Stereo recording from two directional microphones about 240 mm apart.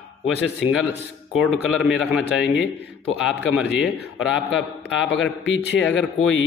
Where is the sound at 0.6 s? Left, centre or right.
Centre.